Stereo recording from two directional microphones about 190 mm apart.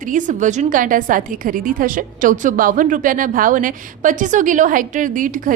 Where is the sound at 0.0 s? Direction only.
45° right (ahead or behind).